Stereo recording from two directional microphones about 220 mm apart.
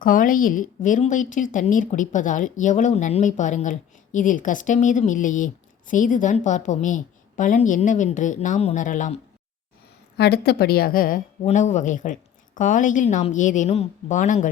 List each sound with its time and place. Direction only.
0.0 s speech: 40° left (ahead or behind)
10.2 s a woman's voice: 45° left (ahead or behind)